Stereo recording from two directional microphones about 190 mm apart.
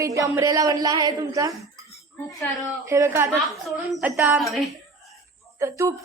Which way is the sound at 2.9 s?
15° right (ahead or behind).